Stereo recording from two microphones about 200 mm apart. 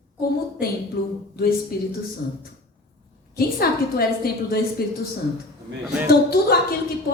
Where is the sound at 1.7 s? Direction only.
50° left (ahead or behind).